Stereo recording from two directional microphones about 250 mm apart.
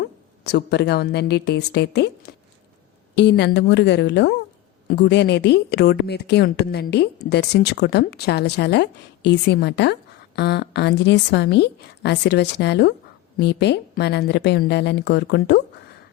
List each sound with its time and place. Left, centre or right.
0.0 s a woman's voice: left